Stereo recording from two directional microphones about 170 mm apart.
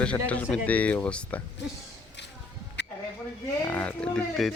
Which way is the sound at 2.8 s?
90° left.